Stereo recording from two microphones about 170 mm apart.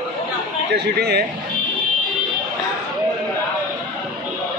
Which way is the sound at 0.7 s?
75° right (ahead or behind).